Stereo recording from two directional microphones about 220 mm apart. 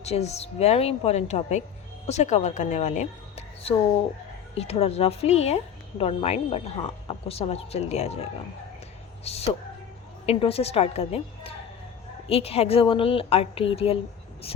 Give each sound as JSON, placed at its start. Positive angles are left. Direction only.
{"t": 0.0, "sound": "a woman's voice", "side_deg": 30}
{"t": 9.2, "sound": "a woman's voice", "side_deg": 30}